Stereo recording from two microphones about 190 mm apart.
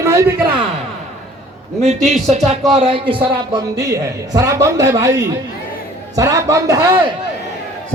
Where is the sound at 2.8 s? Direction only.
25° right (ahead or behind).